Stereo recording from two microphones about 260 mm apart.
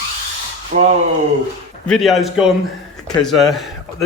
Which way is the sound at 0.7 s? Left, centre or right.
Right.